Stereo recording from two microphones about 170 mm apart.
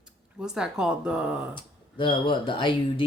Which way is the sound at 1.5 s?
30° left (ahead or behind).